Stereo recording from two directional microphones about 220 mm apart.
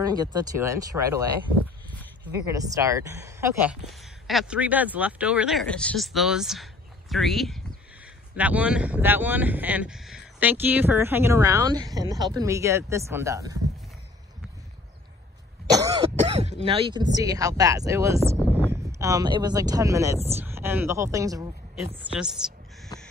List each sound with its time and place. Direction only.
0.0 s speech: 20° right (ahead or behind)
2.4 s speech: 15° right (ahead or behind)
3.9 s speech: centre (ahead or behind)
15.7 s cough: 15° right (ahead or behind)
16.3 s speech: 30° right (ahead or behind)
22.4 s speech: 5° right (ahead or behind)